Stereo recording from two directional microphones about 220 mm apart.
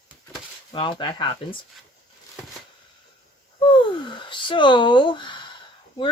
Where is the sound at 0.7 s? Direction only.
20° left (ahead or behind).